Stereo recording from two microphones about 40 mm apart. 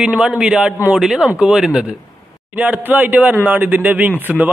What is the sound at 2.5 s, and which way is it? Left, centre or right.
Speech, right.